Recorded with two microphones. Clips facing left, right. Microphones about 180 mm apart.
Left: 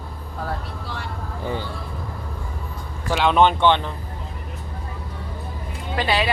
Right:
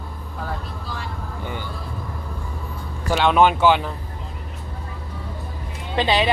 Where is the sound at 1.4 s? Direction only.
30° left (ahead or behind).